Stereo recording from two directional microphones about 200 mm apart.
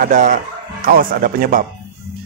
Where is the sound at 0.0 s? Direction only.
40° right (ahead or behind).